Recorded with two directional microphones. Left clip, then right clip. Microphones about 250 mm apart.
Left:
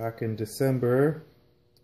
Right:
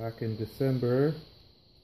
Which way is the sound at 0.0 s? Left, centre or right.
Centre.